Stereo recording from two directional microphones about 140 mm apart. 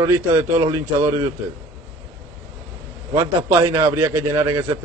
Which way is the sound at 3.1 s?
20° right (ahead or behind).